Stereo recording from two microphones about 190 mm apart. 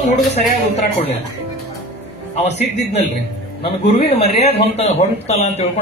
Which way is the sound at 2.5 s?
35° left (ahead or behind).